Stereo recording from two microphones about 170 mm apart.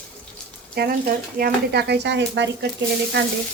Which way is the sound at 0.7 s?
60° right (ahead or behind).